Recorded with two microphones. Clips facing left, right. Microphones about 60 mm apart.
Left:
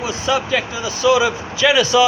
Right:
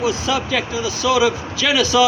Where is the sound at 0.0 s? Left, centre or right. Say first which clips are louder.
Even; left.